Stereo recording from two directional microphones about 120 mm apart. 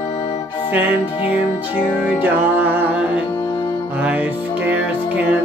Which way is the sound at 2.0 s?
15° right (ahead or behind).